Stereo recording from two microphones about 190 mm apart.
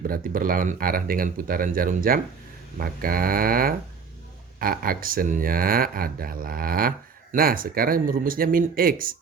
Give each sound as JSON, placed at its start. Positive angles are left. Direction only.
{"t": 0.1, "sound": "speech", "side_deg": -50}